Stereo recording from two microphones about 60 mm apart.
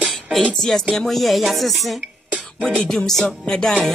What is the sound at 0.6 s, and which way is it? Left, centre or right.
Speech, centre.